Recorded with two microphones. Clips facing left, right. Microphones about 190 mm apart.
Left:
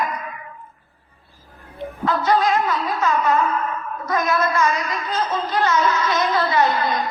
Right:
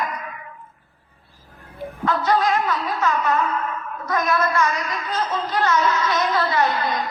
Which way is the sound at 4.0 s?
20° left (ahead or behind).